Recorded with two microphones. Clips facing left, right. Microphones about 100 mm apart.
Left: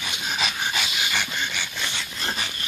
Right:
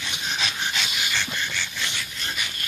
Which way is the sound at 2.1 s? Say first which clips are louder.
Left 3 dB; 35° left (ahead or behind).